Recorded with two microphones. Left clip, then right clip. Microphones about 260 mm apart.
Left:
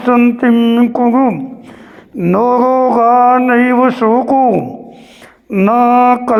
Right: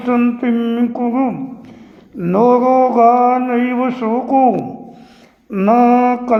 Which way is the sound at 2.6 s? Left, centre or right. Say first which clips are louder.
Left 1 dB; left.